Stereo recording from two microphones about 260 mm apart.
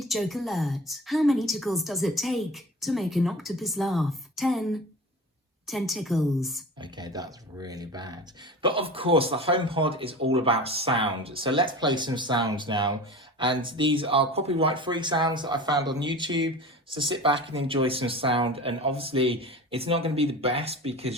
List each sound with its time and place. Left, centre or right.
0.0 s a woman's voice: centre
6.7 s speech: centre